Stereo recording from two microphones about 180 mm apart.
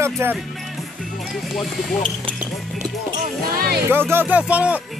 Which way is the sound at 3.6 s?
60° right (ahead or behind).